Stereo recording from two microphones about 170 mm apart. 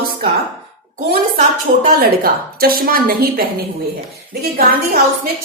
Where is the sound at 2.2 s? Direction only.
60° right (ahead or behind).